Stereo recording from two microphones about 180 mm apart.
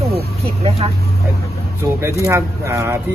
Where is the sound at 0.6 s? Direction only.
35° right (ahead or behind).